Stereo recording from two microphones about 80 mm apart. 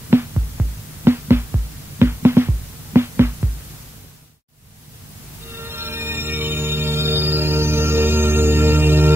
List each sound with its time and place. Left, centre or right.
0.1 s music: right
5.6 s music: right